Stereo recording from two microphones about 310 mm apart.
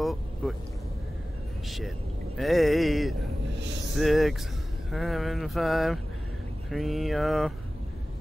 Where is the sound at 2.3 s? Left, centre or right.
Centre.